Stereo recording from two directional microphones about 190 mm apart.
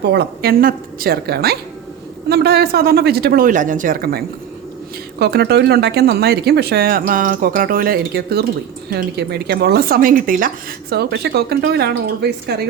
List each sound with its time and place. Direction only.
0.0 s speech: 60° right (ahead or behind)
5.2 s speech: 60° right (ahead or behind)